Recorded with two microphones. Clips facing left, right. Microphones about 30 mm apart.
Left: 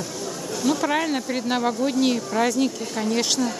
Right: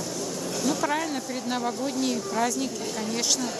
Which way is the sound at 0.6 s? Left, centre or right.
Centre.